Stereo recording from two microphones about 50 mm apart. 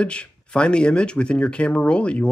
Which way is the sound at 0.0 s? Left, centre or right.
Left.